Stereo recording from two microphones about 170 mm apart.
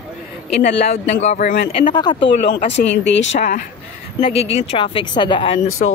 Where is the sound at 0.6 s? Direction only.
40° left (ahead or behind).